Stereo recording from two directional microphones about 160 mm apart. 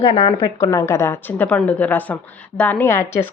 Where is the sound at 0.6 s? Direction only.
20° left (ahead or behind).